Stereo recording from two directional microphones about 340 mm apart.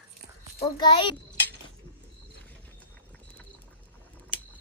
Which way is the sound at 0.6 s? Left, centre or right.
Centre.